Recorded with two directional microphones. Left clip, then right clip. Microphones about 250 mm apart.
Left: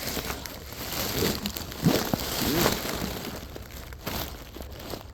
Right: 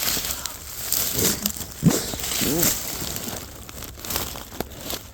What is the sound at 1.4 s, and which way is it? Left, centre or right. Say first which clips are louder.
Crumpling: right 4 dB; centre.